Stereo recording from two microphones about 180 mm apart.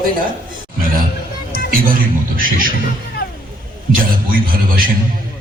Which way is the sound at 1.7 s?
50° right (ahead or behind).